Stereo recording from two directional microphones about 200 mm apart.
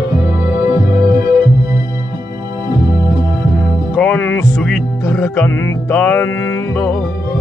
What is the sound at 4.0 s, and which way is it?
Music, 10° left (ahead or behind).